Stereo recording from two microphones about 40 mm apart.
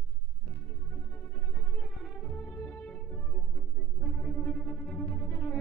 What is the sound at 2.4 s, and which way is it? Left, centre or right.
Music, left.